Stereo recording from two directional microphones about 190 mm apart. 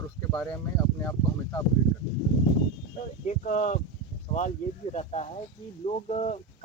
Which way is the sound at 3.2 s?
40° left (ahead or behind).